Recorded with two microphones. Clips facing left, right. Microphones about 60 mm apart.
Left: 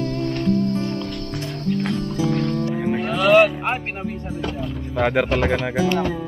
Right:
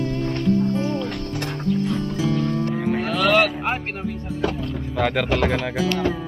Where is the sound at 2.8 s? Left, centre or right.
Centre.